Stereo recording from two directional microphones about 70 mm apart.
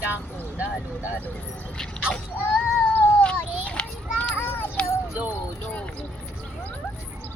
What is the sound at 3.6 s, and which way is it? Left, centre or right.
Children playing, centre.